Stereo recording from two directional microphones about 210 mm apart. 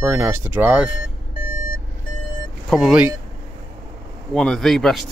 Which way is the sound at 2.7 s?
5° right (ahead or behind).